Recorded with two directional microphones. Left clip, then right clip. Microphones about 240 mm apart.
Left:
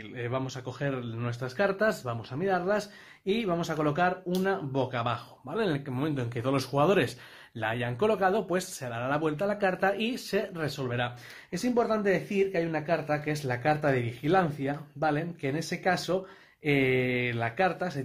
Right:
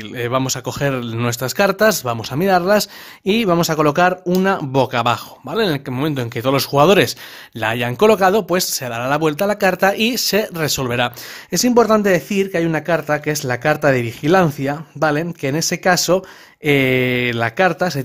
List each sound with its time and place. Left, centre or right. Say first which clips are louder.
0.1 s speech: right 14 dB; right